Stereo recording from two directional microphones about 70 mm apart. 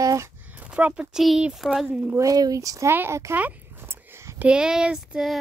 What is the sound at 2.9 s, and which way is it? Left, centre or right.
Speech, right.